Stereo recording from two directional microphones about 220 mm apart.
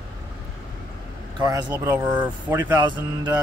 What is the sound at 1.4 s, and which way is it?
Speech, 15° right (ahead or behind).